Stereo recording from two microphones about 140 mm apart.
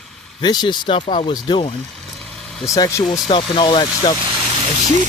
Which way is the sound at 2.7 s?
25° left (ahead or behind).